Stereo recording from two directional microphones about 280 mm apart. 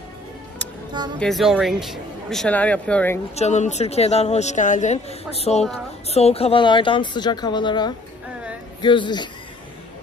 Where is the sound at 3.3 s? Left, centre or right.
Left.